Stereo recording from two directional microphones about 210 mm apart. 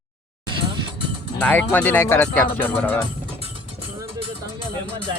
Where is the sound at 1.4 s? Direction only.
5° left (ahead or behind).